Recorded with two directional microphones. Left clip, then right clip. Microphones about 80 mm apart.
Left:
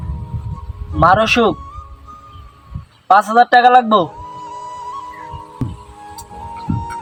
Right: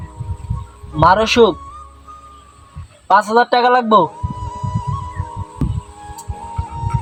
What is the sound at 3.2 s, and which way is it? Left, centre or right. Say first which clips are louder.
Speech: left 1 dB; right.